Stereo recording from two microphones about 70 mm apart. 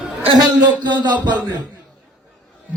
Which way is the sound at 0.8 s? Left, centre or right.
Right.